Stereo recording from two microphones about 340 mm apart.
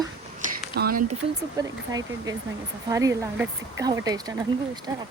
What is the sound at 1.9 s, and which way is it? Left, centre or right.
A woman's voice, centre.